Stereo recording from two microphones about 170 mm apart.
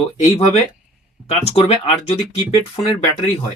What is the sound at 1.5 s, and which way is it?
Speech, 35° left (ahead or behind).